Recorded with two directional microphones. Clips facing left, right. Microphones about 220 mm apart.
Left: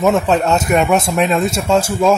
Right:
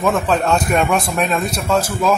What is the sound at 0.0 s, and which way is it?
Speech, 25° left (ahead or behind).